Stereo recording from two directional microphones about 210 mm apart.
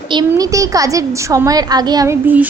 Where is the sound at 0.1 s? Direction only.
20° right (ahead or behind).